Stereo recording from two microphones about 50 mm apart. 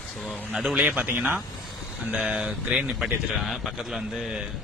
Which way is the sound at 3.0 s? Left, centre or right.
Centre.